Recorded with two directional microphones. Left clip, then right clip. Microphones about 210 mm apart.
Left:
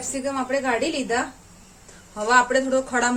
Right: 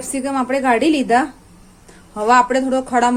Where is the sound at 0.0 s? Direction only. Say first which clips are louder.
Right 5 dB; 30° right (ahead or behind).